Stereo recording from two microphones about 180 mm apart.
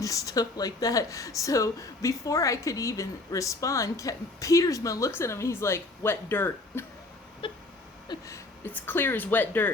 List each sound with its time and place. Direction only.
0.0 s speech: 20° left (ahead or behind)
7.4 s a sound: 30° left (ahead or behind)
8.6 s speech: 10° left (ahead or behind)